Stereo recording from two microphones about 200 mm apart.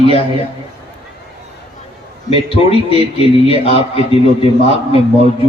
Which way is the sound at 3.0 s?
30° left (ahead or behind).